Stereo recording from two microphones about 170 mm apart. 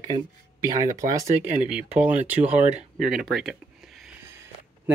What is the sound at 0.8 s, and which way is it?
Speech, 50° right (ahead or behind).